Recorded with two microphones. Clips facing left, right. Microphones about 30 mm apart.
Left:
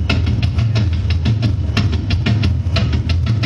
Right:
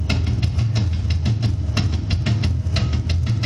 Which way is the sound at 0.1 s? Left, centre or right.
Left.